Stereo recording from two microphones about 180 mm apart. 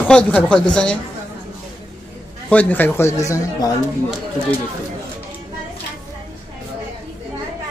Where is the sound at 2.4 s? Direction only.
10° left (ahead or behind).